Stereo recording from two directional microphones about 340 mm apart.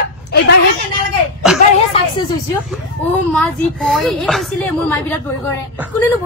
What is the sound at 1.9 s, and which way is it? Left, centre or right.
Speech, centre.